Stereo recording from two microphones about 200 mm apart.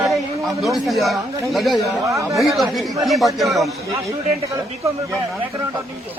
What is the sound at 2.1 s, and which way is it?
Speech, 15° right (ahead or behind).